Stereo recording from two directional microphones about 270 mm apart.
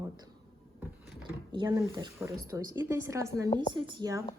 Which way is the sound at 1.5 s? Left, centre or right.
Centre.